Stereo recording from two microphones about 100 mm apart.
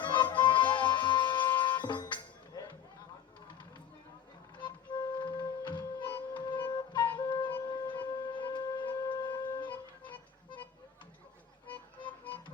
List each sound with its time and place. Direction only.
0.0 s music: 50° left (ahead or behind)
4.5 s music: 50° left (ahead or behind)
7.2 s wind instrument: 50° left (ahead or behind)
11.7 s music: 15° left (ahead or behind)